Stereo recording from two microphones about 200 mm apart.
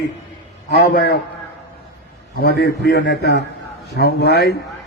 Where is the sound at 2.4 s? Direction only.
55° left (ahead or behind).